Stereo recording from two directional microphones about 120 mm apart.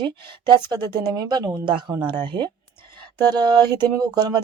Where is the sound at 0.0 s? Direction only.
40° right (ahead or behind).